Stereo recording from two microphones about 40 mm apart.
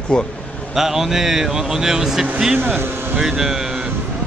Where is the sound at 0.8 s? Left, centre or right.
Centre.